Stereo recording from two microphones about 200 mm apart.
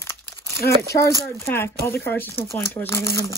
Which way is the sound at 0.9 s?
15° left (ahead or behind).